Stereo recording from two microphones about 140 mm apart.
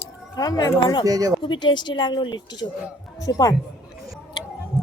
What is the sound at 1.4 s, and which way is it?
Speech, 30° left (ahead or behind).